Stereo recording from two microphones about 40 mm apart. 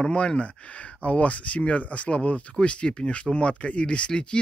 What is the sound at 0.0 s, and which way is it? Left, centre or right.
Speech, left.